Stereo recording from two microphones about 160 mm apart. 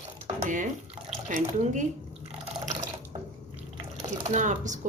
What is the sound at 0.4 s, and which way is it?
Speech, 50° right (ahead or behind).